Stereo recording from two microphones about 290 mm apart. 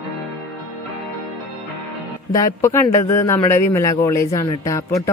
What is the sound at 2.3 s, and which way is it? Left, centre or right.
Speech, centre.